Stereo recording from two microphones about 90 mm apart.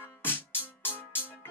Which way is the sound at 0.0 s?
25° left (ahead or behind).